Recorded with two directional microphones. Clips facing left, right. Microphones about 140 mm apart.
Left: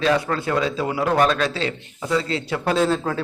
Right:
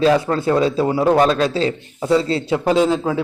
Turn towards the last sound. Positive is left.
turn(degrees=-10)  # may be behind; listen again after turning